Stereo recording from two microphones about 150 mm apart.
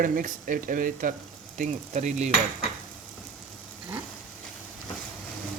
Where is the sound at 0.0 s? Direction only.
70° right (ahead or behind).